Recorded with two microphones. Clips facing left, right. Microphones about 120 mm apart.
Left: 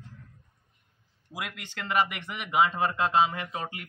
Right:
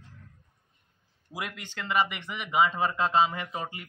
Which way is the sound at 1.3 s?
Centre (ahead or behind).